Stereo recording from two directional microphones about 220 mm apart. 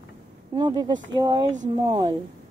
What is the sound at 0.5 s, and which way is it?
Speech, 20° right (ahead or behind).